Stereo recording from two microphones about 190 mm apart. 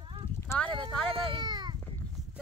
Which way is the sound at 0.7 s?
20° right (ahead or behind).